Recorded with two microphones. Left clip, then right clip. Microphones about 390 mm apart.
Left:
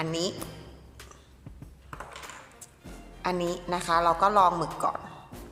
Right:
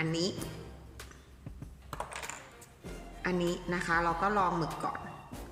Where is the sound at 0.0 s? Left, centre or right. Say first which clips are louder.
Left 3 dB; centre.